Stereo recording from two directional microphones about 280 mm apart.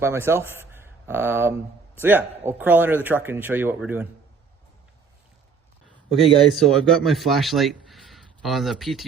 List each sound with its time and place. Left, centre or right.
0.0 s a man's voice: centre
6.1 s speech: centre